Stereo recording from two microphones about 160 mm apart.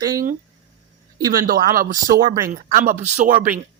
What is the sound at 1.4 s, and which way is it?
Speech, 65° right (ahead or behind).